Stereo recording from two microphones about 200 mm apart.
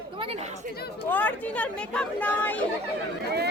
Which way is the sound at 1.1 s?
10° left (ahead or behind).